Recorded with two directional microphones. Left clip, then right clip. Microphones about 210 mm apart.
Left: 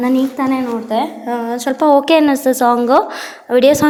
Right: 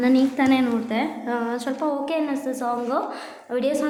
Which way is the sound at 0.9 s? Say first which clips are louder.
Left 7 dB; 20° left (ahead or behind).